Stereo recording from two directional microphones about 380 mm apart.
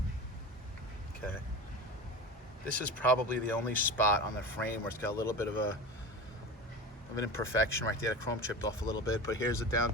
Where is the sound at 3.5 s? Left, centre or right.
Centre.